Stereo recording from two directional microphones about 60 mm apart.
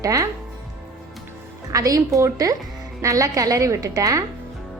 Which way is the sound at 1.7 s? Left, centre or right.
Right.